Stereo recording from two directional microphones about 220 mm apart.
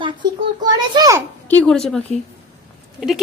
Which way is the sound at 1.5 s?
5° left (ahead or behind).